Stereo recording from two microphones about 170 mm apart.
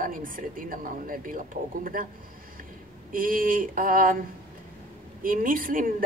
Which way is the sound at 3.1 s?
55° right (ahead or behind).